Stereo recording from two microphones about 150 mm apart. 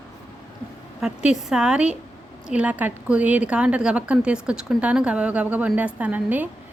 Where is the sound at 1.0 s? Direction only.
5° right (ahead or behind).